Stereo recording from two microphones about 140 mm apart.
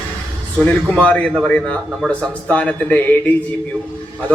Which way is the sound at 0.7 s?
10° left (ahead or behind).